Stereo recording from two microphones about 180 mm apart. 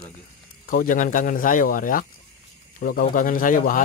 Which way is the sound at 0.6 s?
50° left (ahead or behind).